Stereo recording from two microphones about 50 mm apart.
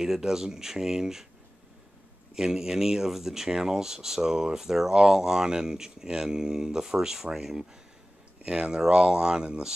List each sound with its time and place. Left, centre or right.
0.0 s speech: centre
2.3 s speech: centre